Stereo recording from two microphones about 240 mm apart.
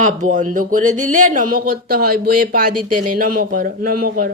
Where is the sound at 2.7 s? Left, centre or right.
Right.